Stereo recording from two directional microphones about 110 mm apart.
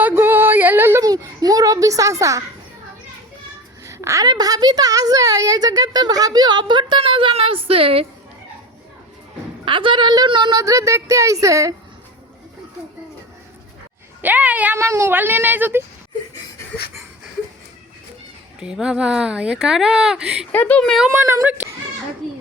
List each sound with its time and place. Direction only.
0.0 s music: 20° right (ahead or behind)
1.0 s a sound: 35° right (ahead or behind)
3.8 s a woman's voice: 25° right (ahead or behind); by 8.0 s 60° right (ahead or behind)
9.6 s a woman's voice: 50° right (ahead or behind)
10.6 s speech: 30° right (ahead or behind)
14.2 s speech: 15° right (ahead or behind)
18.6 s speech: 5° right (ahead or behind)
20.5 s a woman's voice: 15° left (ahead or behind)
20.8 s speech: centre (ahead or behind)
21.1 s speech: 25° right (ahead or behind)